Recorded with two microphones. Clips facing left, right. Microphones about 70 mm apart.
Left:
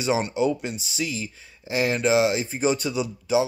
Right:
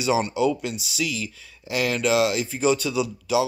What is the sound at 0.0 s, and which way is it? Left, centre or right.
Speech, left.